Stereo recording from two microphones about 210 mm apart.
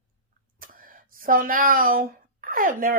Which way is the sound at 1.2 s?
40° right (ahead or behind).